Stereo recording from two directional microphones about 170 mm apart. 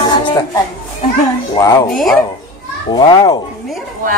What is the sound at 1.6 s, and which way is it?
Speech, 20° left (ahead or behind).